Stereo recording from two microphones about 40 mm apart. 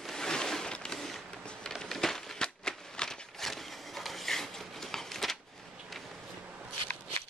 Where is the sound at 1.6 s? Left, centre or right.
Centre.